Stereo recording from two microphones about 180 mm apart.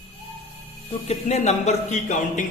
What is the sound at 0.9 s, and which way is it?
A man's voice, 35° left (ahead or behind).